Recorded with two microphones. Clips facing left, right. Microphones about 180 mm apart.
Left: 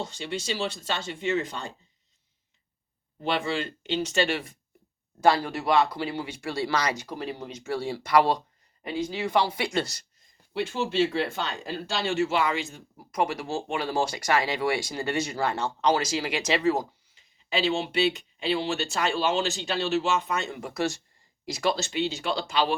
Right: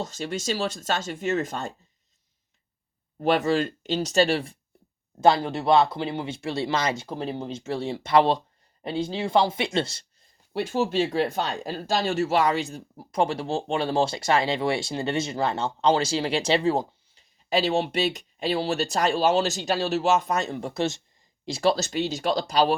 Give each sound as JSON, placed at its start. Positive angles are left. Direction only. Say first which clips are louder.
{"t": 0.0, "sound": "speech", "louder": "right 3 dB", "side_deg": -45}
{"t": 3.2, "sound": "speech", "louder": "right 6 dB", "side_deg": -45}
{"t": 10.5, "sound": "speech", "louder": "right 3 dB", "side_deg": -45}
{"t": 17.5, "sound": "speech", "louder": "right 3 dB", "side_deg": -40}